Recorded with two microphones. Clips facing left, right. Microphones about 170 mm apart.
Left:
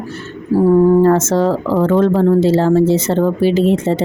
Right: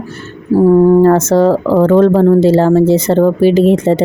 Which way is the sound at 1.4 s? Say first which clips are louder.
Right 5 dB; 55° right (ahead or behind).